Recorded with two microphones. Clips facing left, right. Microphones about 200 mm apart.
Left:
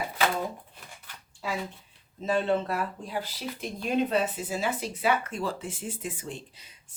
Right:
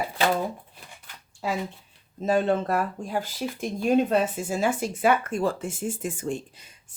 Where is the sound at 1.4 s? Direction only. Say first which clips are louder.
Right 4 dB; 45° right (ahead or behind).